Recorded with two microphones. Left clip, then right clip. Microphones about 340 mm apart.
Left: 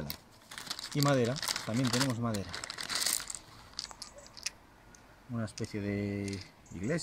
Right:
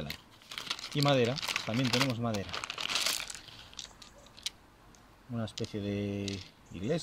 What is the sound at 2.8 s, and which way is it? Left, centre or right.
Crumpling, right.